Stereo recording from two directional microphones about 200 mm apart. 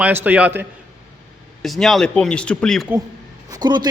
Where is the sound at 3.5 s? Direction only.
20° right (ahead or behind).